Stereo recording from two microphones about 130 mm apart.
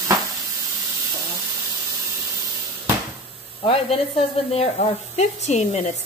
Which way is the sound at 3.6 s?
45° left (ahead or behind).